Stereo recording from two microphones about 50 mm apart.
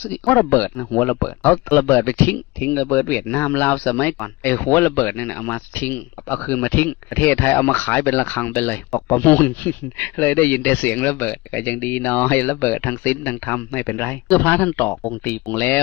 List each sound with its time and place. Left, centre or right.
0.0 s speech: left